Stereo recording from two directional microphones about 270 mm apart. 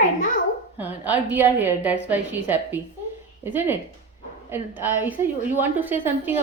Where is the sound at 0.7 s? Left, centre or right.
Centre.